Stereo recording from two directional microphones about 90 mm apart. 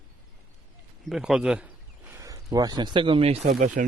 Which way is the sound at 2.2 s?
45° right (ahead or behind).